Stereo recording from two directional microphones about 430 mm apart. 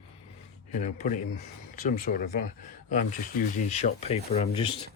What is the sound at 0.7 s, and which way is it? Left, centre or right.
Speech, centre.